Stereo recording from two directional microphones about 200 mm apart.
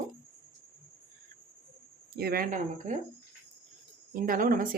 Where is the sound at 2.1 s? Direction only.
50° right (ahead or behind).